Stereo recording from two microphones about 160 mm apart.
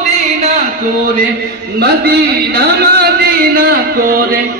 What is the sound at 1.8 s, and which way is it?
A man's voice, 85° right.